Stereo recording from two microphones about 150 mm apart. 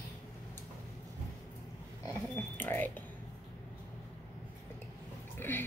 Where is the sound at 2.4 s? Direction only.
15° left (ahead or behind).